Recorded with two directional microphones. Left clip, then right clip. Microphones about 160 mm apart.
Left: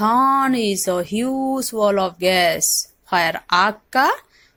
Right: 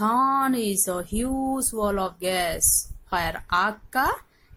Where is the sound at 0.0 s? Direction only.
25° left (ahead or behind).